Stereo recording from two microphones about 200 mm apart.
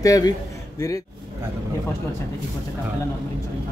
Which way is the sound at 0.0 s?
20° left (ahead or behind).